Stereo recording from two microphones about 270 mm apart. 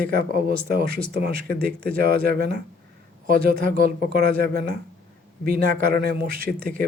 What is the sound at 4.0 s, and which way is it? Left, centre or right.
Speech, right.